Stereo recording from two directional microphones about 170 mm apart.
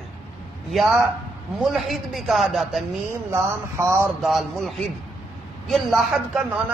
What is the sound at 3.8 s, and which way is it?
Speech, 15° right (ahead or behind).